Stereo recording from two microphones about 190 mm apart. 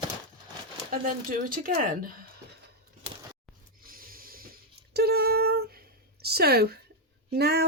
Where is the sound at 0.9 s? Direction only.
50° right (ahead or behind).